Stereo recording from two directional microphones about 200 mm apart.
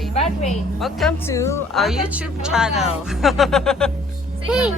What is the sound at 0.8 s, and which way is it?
Speech, centre (ahead or behind).